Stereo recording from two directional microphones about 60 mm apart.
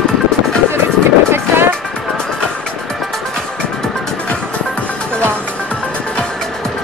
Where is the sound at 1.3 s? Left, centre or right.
Right.